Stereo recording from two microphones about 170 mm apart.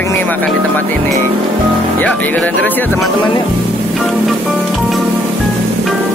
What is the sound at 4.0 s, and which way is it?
Music, centre (ahead or behind).